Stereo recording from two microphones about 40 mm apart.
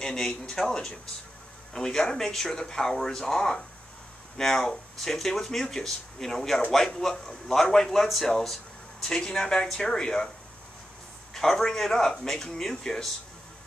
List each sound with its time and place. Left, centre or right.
0.0 s speech: centre
11.3 s speech: centre